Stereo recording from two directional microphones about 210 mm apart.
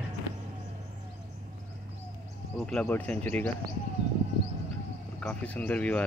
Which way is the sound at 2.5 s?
5° left (ahead or behind).